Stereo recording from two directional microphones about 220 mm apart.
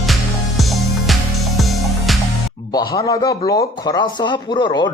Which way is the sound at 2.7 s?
15° left (ahead or behind).